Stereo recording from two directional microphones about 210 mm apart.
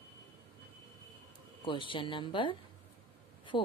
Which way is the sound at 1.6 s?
25° left (ahead or behind).